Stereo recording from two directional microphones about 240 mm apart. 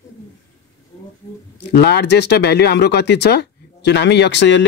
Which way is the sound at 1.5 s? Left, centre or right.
Left.